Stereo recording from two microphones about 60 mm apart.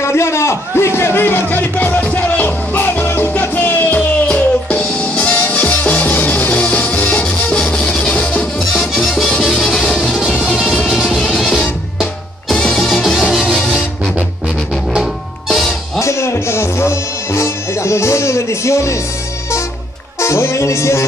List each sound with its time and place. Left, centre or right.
0.0 s music: left
7.2 s music: centre
8.5 s music: centre
12.7 s music: centre
15.0 s music: centre
16.0 s music: left
20.2 s music: left